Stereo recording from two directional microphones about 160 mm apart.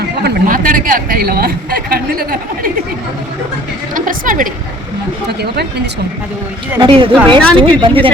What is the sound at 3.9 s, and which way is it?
Speech, 55° right (ahead or behind).